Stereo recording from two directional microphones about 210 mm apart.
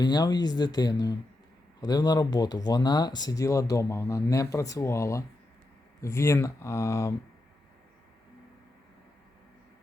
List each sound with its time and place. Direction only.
0.0 s speech: 20° left (ahead or behind)